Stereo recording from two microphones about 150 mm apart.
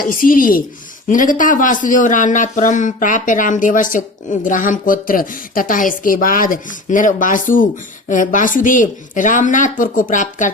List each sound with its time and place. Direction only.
0.0 s speech: 70° left (ahead or behind)